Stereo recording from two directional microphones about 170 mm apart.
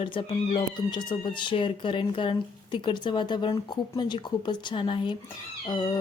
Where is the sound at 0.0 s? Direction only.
30° left (ahead or behind).